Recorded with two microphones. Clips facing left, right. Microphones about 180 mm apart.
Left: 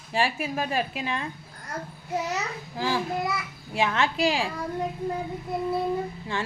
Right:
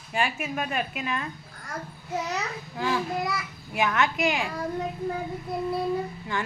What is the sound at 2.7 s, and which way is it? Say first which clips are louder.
A woman's voice: even; 30° left (ahead or behind).